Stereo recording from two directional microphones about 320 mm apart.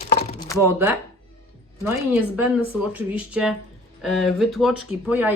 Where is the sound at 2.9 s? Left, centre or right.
Centre.